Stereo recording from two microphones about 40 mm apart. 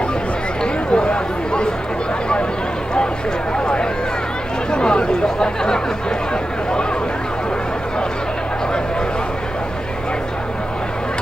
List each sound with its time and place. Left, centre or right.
0.9 s chatter: left
3.5 s a sound: left
4.6 s chatter: left